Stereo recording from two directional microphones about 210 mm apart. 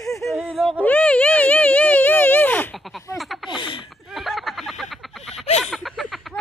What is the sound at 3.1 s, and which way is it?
Baby laughter, centre (ahead or behind).